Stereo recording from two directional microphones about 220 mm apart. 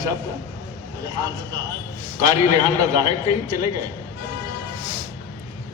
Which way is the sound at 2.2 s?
20° right (ahead or behind).